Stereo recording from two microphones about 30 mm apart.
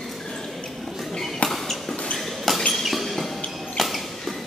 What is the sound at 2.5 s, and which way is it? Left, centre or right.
Ping, centre.